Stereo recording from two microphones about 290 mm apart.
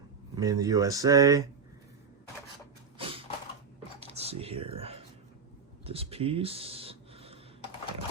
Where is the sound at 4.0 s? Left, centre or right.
Right.